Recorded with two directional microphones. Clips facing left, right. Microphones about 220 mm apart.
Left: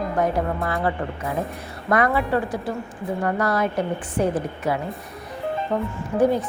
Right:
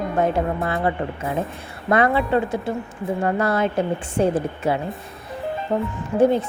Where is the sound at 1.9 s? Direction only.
25° right (ahead or behind).